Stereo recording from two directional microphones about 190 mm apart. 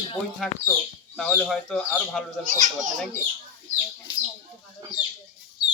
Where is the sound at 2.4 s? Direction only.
45° right (ahead or behind).